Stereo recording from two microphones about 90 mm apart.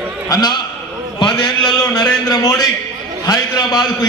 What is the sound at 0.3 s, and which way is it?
A man's voice, 50° left (ahead or behind).